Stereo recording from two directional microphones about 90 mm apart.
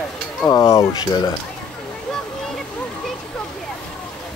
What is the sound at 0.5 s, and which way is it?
Speech, 35° left (ahead or behind).